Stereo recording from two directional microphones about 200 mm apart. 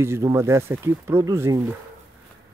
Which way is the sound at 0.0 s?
15° right (ahead or behind).